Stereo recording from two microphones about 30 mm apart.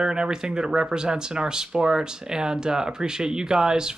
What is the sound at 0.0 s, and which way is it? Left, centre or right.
Speech, right.